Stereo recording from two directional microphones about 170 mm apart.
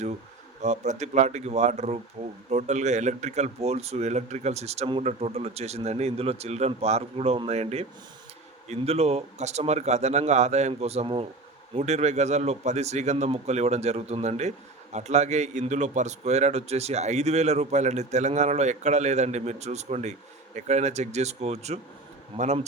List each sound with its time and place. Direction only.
0.6 s speech: 45° right (ahead or behind)